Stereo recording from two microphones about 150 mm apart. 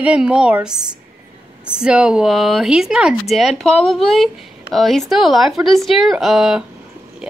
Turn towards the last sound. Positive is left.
turn(degrees=-5)  # may be behind; listen again after turning